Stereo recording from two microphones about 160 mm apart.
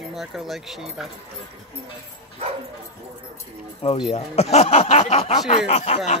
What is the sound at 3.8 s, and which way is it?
Speech, 35° left (ahead or behind).